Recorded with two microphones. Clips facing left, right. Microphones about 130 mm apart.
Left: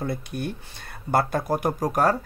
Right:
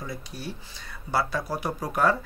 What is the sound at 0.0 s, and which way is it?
Speech, 60° left (ahead or behind).